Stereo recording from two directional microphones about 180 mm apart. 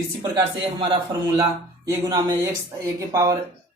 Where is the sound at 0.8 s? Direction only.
20° right (ahead or behind).